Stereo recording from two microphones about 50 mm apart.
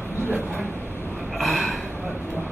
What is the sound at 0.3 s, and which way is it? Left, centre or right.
Speech, right.